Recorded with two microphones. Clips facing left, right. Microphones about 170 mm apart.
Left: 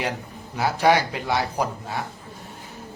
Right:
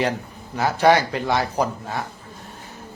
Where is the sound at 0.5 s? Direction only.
10° left (ahead or behind).